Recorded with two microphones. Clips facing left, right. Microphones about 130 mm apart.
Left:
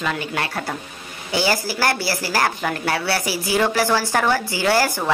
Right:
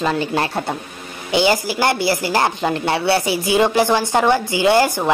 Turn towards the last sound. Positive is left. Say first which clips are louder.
# right 4 dB
turn(degrees=-20)  # may be behind; listen again after turning